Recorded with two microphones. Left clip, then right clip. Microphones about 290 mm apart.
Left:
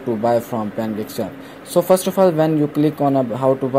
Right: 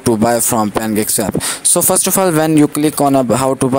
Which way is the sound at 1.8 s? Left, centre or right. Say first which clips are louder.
Left 1 dB; right.